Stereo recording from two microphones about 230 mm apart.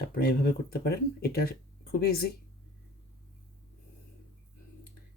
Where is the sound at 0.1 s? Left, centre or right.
Left.